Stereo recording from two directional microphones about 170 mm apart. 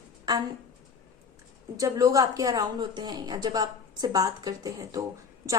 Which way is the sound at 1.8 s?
20° right (ahead or behind).